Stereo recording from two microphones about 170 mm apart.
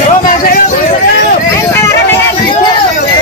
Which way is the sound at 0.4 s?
55° left (ahead or behind).